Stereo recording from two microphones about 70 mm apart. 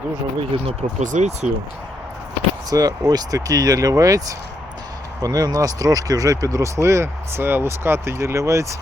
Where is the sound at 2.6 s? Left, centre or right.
Right.